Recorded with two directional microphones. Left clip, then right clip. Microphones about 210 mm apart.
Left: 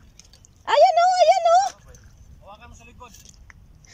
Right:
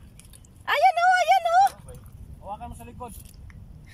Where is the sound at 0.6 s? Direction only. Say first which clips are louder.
Left 4 dB; 25° left (ahead or behind).